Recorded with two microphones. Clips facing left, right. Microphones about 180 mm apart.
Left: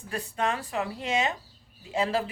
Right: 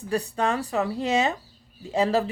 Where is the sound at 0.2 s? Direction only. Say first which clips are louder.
Right 4 dB; 40° right (ahead or behind).